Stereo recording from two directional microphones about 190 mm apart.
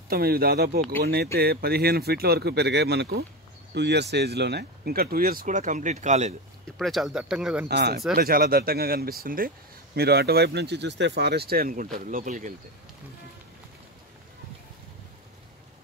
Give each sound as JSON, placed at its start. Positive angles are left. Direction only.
{"t": 0.1, "sound": "speech", "side_deg": -55}
{"t": 6.8, "sound": "speech", "side_deg": 0}
{"t": 7.6, "sound": "speech", "side_deg": -55}